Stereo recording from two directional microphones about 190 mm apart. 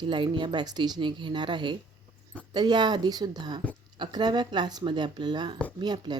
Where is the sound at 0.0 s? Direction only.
25° right (ahead or behind).